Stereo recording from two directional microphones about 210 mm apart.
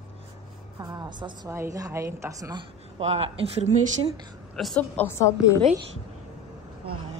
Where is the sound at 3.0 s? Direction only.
30° right (ahead or behind).